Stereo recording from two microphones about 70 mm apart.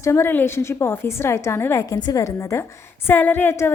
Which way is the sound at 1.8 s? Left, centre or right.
Left.